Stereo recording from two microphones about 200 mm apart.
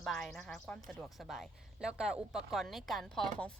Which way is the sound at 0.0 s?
Centre (ahead or behind).